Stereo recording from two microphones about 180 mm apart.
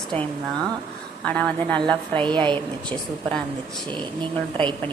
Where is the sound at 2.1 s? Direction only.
25° right (ahead or behind).